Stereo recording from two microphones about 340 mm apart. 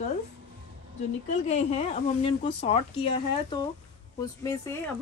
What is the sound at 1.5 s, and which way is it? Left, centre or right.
Speech, centre.